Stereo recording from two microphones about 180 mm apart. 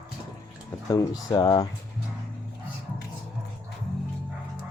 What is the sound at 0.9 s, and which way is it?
Speech, 20° left (ahead or behind).